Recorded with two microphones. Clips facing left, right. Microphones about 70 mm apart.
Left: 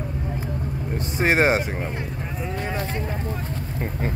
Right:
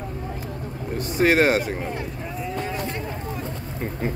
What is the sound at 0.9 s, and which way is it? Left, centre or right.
Speech, left.